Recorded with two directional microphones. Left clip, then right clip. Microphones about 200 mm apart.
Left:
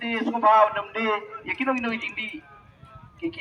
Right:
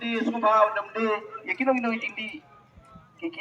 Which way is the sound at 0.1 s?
30° right (ahead or behind).